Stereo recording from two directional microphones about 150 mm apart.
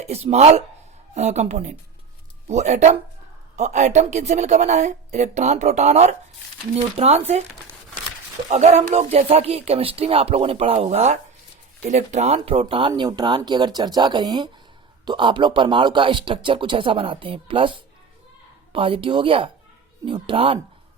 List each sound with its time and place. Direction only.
0.1 s speech: 45° right (ahead or behind)
8.4 s speech: 50° right (ahead or behind)
12.9 s speech: 25° right (ahead or behind)